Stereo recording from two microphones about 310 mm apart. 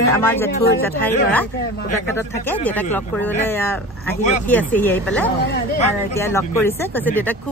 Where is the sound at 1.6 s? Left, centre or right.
Left.